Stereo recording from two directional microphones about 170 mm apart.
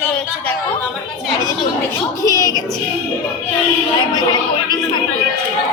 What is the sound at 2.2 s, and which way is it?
Speech, 20° left (ahead or behind).